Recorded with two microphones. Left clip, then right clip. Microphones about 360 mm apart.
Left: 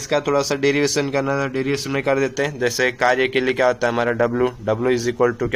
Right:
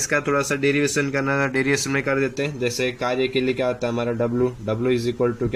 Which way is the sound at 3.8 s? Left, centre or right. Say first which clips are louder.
Left 5 dB; left.